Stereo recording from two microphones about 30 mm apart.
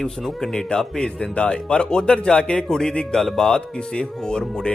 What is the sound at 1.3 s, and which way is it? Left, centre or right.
Speech, left.